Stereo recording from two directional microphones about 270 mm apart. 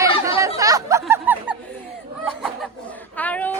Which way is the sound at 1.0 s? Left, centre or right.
Centre.